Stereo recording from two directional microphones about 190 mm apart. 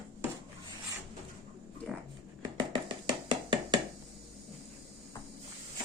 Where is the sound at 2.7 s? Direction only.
25° right (ahead or behind).